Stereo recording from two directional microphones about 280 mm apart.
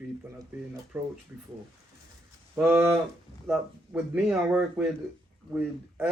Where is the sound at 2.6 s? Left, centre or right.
Centre.